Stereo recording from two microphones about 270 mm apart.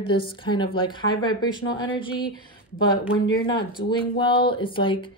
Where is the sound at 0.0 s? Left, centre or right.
Centre.